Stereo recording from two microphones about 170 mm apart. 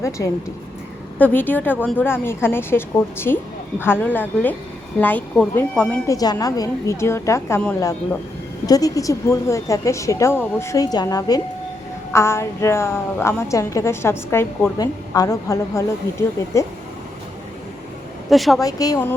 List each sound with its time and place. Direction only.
0.2 s a woman's voice: 20° left (ahead or behind)
6.1 s a woman's voice: 20° left (ahead or behind)
8.6 s a woman's voice: 20° left (ahead or behind)
18.3 s a woman's voice: centre (ahead or behind)
18.6 s speech: 20° left (ahead or behind)